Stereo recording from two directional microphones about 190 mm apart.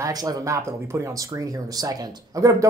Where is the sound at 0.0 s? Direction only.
20° right (ahead or behind).